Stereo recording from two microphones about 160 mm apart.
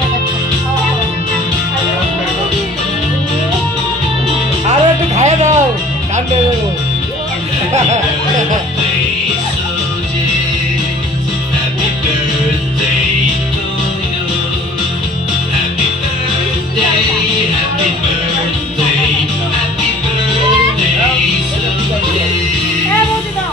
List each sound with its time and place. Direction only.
4.6 s music: 45° right (ahead or behind)